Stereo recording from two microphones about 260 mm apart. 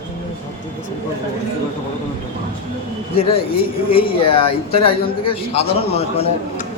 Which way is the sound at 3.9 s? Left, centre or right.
Left.